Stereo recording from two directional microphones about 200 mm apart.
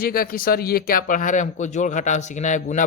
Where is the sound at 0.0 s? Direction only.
45° left (ahead or behind).